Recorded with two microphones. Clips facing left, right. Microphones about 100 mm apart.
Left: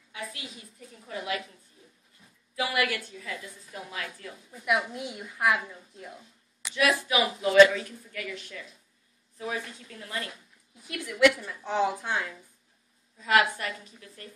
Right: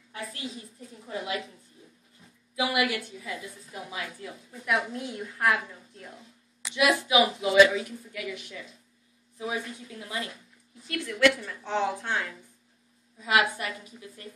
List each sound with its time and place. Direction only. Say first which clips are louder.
1.0 s a woman's voice: even; 20° right (ahead or behind)
2.5 s a woman's voice: right 2 dB; 15° right (ahead or behind)
4.5 s a woman's voice: left 1 dB; 10° left (ahead or behind)
6.7 s a woman's voice: right 2 dB; 15° right (ahead or behind)
7.2 s a woman's voice: left 4 dB; 5° right (ahead or behind)
10.9 s a woman's voice: left 1 dB; 10° left (ahead or behind)
13.2 s a woman's voice: left 1 dB; 10° right (ahead or behind)